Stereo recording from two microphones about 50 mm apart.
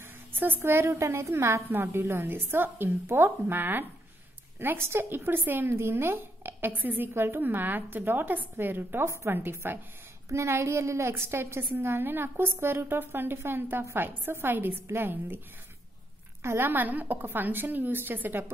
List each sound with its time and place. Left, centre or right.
0.3 s a sound: right
0.6 s a woman's voice: right
0.8 s a woman's voice: right
1.7 s a woman's voice: right
5.7 s a woman's voice: right
7.2 s a woman's voice: right
9.0 s a woman's voice: right
9.3 s a woman's voice: right
10.3 s a woman's voice: right
14.5 s a woman's voice: right
16.4 s a woman's voice: right
16.7 s a woman's voice: right